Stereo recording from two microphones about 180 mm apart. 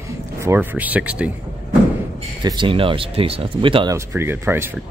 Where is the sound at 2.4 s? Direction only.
25° right (ahead or behind).